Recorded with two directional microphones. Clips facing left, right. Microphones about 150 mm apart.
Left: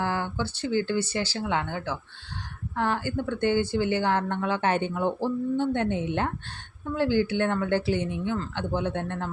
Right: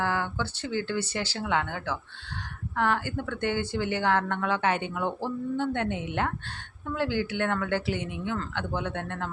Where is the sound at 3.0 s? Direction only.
30° left (ahead or behind).